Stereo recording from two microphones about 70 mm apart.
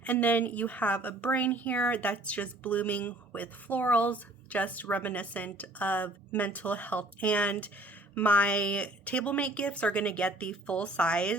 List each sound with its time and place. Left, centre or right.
0.0 s a woman's voice: left